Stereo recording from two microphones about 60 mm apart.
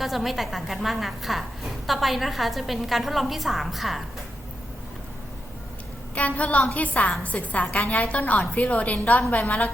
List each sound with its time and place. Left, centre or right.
0.0 s a woman's voice: centre
6.1 s a woman's voice: left